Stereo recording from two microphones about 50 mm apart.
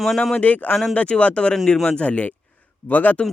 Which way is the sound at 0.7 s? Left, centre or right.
Centre.